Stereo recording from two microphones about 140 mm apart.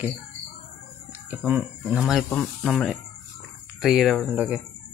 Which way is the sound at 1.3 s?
10° right (ahead or behind).